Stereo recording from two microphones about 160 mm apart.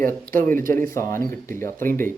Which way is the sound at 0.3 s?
60° right (ahead or behind).